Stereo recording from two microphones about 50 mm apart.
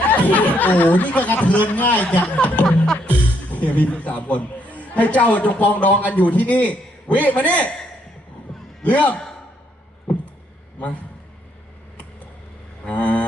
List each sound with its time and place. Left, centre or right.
0.1 s a man's voice: left
2.6 s music: centre
3.5 s a man's voice: left
8.8 s a man's voice: left
12.9 s a sound: left